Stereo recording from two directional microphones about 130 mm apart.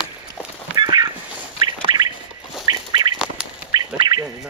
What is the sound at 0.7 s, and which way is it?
Duck, 30° right (ahead or behind).